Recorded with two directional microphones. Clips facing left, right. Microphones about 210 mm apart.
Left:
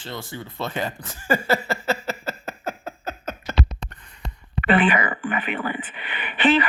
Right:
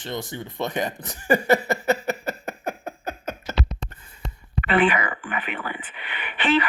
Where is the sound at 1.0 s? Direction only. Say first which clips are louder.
Right 4 dB; 15° right (ahead or behind).